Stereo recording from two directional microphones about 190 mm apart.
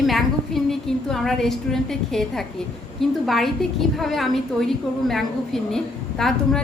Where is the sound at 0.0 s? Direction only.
Centre (ahead or behind).